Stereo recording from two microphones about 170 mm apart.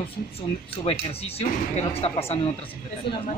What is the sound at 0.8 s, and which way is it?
Speech, 35° left (ahead or behind).